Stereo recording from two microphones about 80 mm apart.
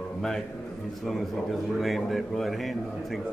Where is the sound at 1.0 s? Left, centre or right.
Centre.